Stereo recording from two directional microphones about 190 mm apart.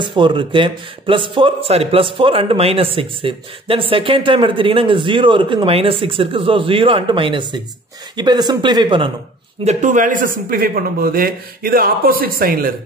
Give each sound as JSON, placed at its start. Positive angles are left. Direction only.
{"t": 0.0, "sound": "speech", "side_deg": -25}
{"t": 9.7, "sound": "a man's voice", "side_deg": -40}